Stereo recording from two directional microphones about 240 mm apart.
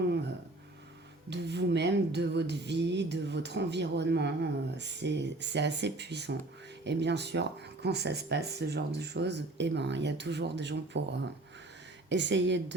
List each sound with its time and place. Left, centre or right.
1.3 s speech: right